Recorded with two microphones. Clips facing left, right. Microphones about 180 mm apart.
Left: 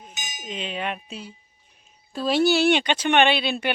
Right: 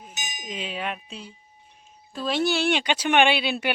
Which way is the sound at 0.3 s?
10° right (ahead or behind).